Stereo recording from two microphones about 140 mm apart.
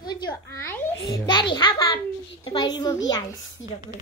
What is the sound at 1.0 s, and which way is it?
A child's voice, 30° left (ahead or behind).